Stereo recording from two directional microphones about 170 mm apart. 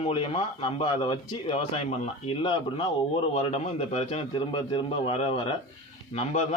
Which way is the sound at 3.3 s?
40° left (ahead or behind).